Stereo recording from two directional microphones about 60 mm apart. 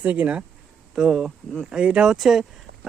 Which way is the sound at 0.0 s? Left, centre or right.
Right.